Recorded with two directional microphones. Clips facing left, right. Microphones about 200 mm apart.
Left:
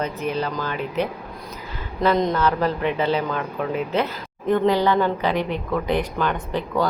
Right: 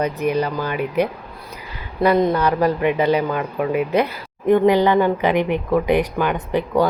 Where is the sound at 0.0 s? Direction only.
15° right (ahead or behind).